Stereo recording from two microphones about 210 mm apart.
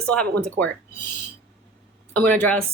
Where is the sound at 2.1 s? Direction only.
10° left (ahead or behind).